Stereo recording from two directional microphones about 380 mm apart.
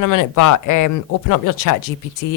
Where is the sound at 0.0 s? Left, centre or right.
Left.